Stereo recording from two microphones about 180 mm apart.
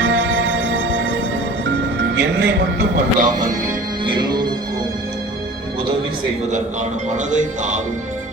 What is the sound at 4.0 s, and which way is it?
Music, 25° right (ahead or behind).